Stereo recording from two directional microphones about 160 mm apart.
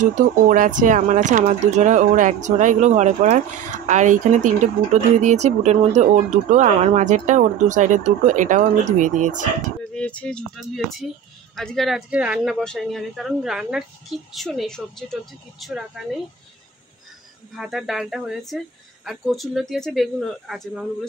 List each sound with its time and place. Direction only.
0.0 s speech: 55° right (ahead or behind)
9.9 s speech: 5° left (ahead or behind)
17.6 s speech: centre (ahead or behind)